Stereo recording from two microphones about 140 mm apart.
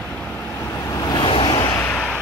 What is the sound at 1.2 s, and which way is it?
Vehicle, 40° left (ahead or behind).